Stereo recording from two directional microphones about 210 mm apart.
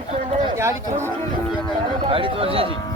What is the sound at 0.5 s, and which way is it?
Speech, 15° right (ahead or behind).